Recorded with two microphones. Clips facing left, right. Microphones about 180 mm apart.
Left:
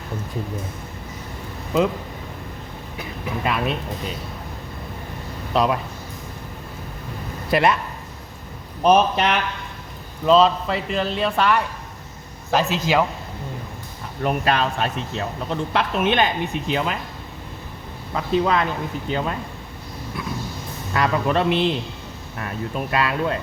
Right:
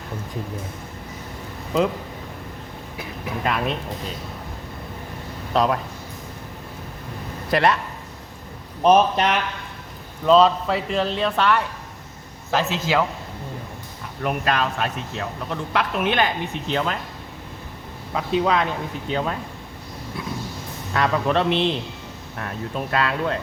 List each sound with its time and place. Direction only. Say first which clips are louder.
3.4 s a man's voice: even; 5° left (ahead or behind)
5.5 s a man's voice: even; 5° left (ahead or behind)
7.5 s speech: left 1 dB; 10° left (ahead or behind)
8.8 s a man's voice: even; centre (ahead or behind)
14.2 s speech: left 2 dB; 30° left (ahead or behind); by 17.0 s 10° left (ahead or behind)
18.1 s a man's voice: left 1 dB; centre (ahead or behind)
20.9 s a man's voice: even; 5° left (ahead or behind)